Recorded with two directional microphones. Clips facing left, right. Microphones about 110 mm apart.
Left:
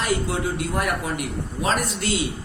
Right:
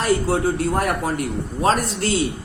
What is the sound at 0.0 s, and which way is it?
A man's voice, 40° right (ahead or behind).